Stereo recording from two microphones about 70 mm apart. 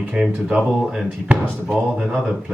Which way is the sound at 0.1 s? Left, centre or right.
Centre.